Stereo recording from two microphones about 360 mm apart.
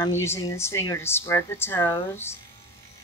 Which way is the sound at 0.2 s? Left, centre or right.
Centre.